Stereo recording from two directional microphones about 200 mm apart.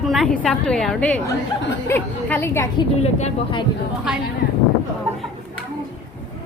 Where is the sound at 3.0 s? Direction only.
35° left (ahead or behind).